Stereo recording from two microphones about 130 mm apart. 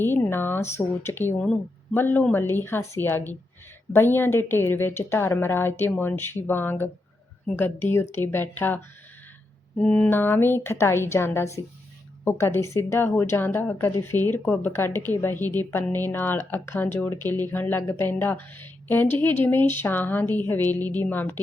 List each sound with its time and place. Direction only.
0.0 s speech: 15° left (ahead or behind)